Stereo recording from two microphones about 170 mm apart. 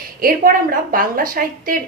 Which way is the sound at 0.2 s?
55° right (ahead or behind).